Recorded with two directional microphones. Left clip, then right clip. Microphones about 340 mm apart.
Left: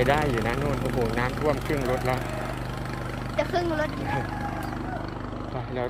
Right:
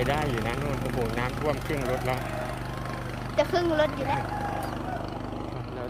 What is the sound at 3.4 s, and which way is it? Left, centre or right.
Speech, right.